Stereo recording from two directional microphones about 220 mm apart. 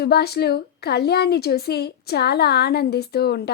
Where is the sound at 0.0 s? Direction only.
45° left (ahead or behind).